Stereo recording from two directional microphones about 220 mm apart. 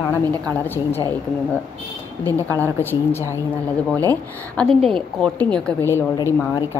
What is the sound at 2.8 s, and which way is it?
A woman's voice, 10° left (ahead or behind).